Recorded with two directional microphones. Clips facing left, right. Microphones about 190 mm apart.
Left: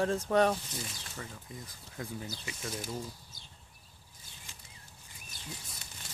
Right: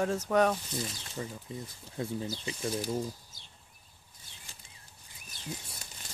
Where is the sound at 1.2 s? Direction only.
25° right (ahead or behind).